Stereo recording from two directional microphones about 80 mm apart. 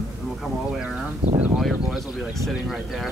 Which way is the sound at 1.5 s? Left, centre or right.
Centre.